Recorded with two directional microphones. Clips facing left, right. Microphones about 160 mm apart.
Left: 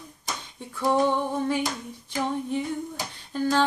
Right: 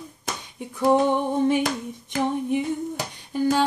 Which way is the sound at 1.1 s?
20° right (ahead or behind).